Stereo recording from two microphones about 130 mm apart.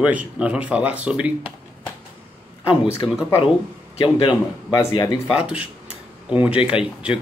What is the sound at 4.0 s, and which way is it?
Speech, 35° left (ahead or behind).